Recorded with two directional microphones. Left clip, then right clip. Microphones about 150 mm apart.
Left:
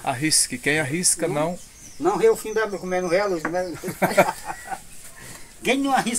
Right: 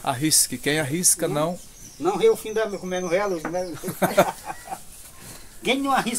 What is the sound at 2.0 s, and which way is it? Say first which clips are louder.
Speech: left 1 dB; 5° left (ahead or behind).